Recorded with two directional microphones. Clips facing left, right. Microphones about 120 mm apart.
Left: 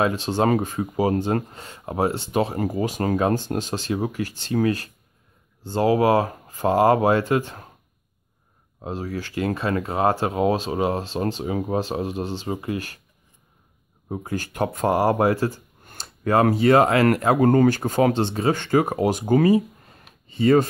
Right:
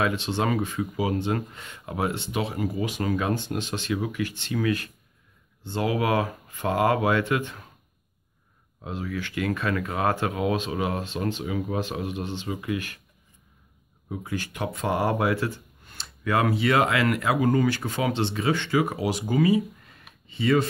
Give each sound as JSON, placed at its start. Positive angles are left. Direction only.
{"t": 0.0, "sound": "speech", "side_deg": 40}
{"t": 8.8, "sound": "speech", "side_deg": 35}
{"t": 14.0, "sound": "speech", "side_deg": 40}